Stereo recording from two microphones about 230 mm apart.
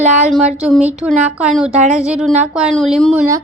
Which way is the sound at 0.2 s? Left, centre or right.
Centre.